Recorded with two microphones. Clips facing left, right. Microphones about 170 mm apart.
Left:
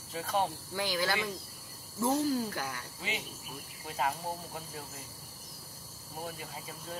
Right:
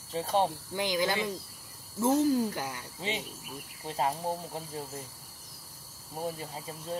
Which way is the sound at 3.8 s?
30° right (ahead or behind).